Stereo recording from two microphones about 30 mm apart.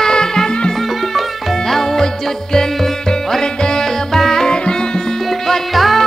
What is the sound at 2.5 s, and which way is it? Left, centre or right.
Music, centre.